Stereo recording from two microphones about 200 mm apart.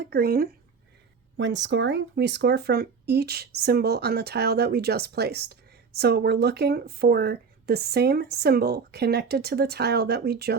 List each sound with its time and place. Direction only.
0.0 s speech: 50° right (ahead or behind)
1.4 s speech: 65° right (ahead or behind)